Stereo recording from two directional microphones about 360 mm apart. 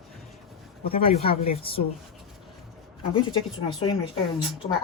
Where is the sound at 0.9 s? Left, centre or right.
Centre.